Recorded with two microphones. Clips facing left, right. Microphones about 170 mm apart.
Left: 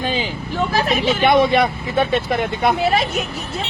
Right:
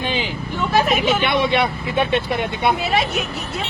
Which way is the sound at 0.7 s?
35° left (ahead or behind).